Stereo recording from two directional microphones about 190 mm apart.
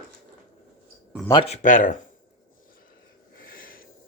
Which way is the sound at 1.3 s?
30° left (ahead or behind).